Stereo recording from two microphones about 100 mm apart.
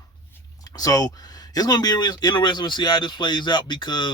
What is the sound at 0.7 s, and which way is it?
Speech, 40° left (ahead or behind).